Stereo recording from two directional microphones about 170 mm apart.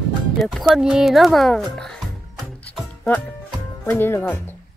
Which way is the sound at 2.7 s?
5° left (ahead or behind).